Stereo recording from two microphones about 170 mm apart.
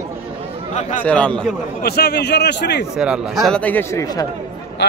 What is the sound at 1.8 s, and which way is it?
A man's voice, 70° left (ahead or behind).